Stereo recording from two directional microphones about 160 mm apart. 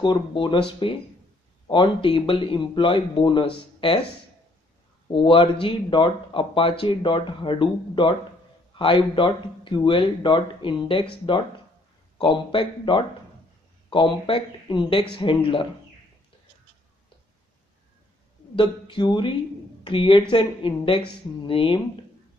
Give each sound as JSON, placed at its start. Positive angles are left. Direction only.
{"t": 0.0, "sound": "speech", "side_deg": 30}
{"t": 5.0, "sound": "speech", "side_deg": 30}
{"t": 12.2, "sound": "speech", "side_deg": 30}
{"t": 18.6, "sound": "speech", "side_deg": 30}